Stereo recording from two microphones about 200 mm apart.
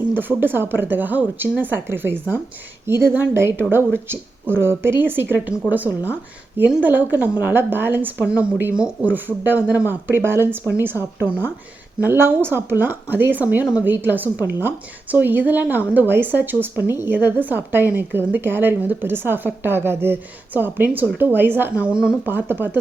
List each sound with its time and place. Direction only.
0.1 s a woman's voice: 10° right (ahead or behind)
11.9 s a woman's voice: 10° right (ahead or behind)